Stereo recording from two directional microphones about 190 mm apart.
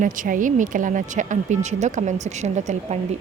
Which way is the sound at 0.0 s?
45° right (ahead or behind).